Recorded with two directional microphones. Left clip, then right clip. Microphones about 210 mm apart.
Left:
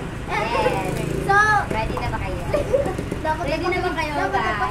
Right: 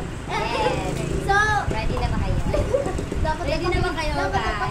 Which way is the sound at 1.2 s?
5° left (ahead or behind).